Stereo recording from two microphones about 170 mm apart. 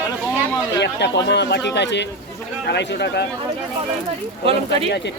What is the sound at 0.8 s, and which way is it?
Speech, 90° left.